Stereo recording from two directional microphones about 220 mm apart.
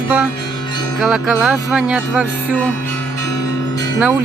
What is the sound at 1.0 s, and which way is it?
Music, 5° right (ahead or behind).